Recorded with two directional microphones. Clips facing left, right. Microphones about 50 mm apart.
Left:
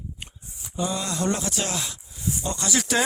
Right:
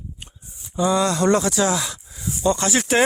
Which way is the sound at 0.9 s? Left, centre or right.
Right.